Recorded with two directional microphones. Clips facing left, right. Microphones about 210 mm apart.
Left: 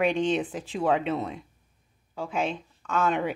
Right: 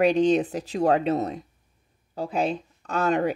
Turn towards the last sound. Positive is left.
turn(degrees=-40)  # may be behind; listen again after turning